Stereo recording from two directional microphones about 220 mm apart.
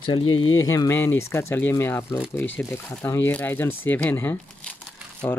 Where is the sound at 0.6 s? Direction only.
15° left (ahead or behind).